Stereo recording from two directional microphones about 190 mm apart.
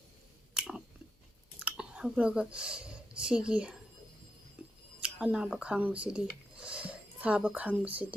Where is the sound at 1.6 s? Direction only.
5° right (ahead or behind).